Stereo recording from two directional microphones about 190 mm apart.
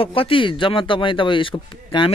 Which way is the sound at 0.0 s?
30° left (ahead or behind).